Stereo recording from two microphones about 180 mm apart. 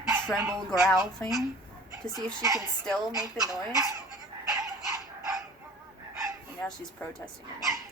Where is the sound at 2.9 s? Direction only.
Centre (ahead or behind).